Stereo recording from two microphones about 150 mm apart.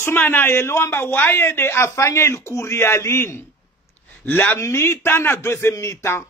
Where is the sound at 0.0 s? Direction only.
15° left (ahead or behind).